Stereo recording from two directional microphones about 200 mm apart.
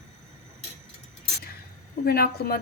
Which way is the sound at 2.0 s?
50° left (ahead or behind).